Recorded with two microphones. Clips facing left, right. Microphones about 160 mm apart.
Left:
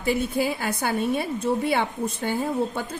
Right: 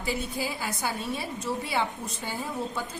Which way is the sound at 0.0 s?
55° left (ahead or behind).